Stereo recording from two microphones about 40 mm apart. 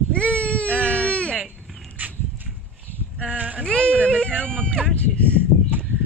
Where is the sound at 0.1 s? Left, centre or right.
Left.